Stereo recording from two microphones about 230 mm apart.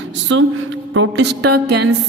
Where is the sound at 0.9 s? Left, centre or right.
Right.